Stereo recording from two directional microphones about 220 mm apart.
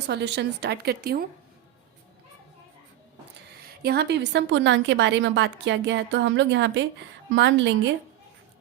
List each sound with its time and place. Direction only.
0.1 s a woman's voice: 50° right (ahead or behind)
3.8 s a woman's voice: 50° right (ahead or behind)